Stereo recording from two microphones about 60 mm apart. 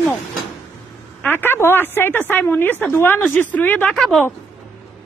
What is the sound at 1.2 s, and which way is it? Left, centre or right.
A woman's voice, left.